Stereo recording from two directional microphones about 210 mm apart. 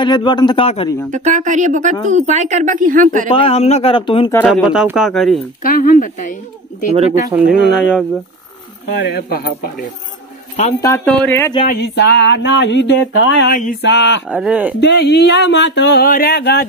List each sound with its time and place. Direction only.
0.0 s a man's voice: 20° left (ahead or behind)
1.1 s a woman's voice: 35° right (ahead or behind)
3.3 s a man's voice: 25° left (ahead or behind)
4.5 s speech: centre (ahead or behind)
5.6 s speech: 40° left (ahead or behind)
7.3 s speech: centre (ahead or behind)
8.8 s speech: 50° left (ahead or behind)
10.8 s speech: 10° left (ahead or behind)
11.6 s a sound: 50° left (ahead or behind)
13.5 s speech: 40° left (ahead or behind)
13.8 s a sound: 55° left (ahead or behind)
14.3 s speech: 5° right (ahead or behind)
14.8 s speech: 55° left (ahead or behind)